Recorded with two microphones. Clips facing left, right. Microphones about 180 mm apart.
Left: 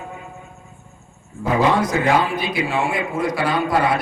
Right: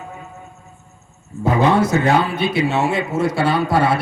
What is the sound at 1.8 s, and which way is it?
Speech, 25° right (ahead or behind).